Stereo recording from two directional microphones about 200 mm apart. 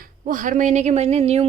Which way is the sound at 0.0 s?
40° right (ahead or behind).